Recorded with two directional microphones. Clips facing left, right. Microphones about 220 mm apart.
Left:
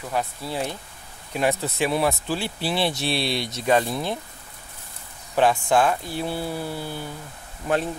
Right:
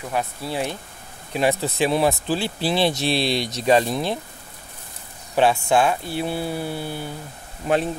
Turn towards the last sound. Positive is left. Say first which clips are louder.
# right 3 dB
turn(degrees=-20)  # may be behind; listen again after turning